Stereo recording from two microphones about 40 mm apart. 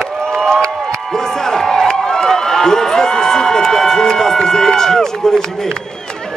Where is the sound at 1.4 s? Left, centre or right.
Centre.